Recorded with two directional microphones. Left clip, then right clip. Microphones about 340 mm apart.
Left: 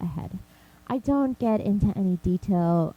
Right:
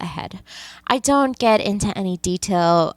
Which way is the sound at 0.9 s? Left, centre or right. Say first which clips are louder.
Right 9 dB; centre.